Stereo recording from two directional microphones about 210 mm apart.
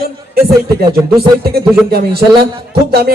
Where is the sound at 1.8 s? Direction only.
50° right (ahead or behind).